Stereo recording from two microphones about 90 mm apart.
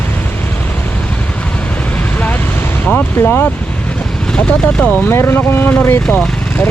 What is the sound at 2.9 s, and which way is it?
Speech, 20° left (ahead or behind).